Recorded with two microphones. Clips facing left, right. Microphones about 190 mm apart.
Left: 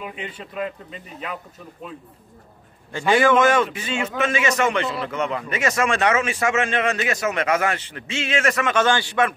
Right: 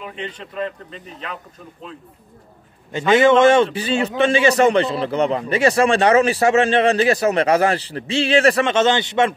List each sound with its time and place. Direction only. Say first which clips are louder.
0.0 s a man's voice: right 2 dB; 10° left (ahead or behind)
3.1 s a man's voice: right 4 dB; 25° right (ahead or behind)